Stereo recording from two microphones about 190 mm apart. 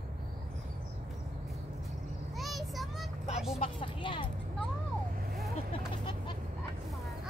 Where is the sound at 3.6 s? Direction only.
25° left (ahead or behind).